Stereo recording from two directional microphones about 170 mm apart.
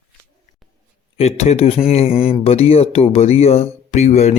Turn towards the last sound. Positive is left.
turn(degrees=40)  # may be behind; listen again after turning